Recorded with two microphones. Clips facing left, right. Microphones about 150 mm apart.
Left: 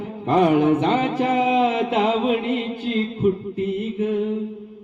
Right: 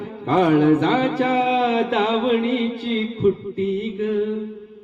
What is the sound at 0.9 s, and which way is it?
Mantra, 40° right (ahead or behind).